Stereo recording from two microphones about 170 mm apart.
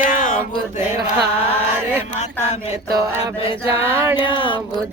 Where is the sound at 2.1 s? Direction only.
40° left (ahead or behind).